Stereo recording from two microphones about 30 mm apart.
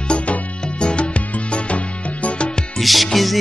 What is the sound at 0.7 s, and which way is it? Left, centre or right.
Music, left.